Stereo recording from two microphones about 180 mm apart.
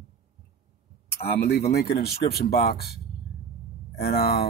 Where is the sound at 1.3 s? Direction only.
65° left (ahead or behind).